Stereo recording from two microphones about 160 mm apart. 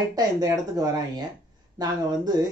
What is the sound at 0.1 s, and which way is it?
Speech, 25° right (ahead or behind).